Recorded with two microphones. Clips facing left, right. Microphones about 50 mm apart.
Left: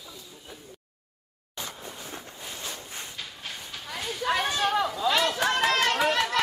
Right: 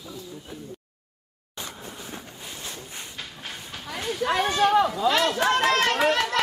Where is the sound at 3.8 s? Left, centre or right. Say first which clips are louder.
Right 3 dB; centre.